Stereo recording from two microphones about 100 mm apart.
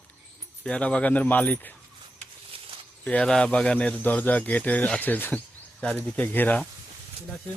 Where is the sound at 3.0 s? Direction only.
10° left (ahead or behind).